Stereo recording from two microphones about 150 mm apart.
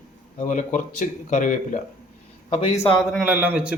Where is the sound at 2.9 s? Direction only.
5° right (ahead or behind).